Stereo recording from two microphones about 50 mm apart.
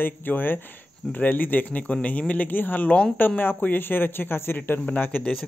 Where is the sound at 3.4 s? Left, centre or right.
Left.